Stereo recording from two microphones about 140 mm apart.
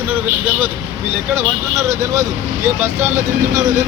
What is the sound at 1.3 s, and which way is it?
Speech, 20° right (ahead or behind).